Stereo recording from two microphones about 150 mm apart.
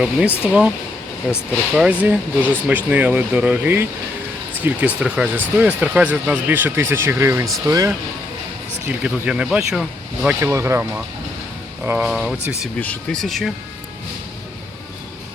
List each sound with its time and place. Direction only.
0.0 s speech: 5° right (ahead or behind); by 7.9 s 20° right (ahead or behind)
8.9 s speech: 10° right (ahead or behind)
10.2 s speech: 15° right (ahead or behind)
12.8 s speech: 10° left (ahead or behind)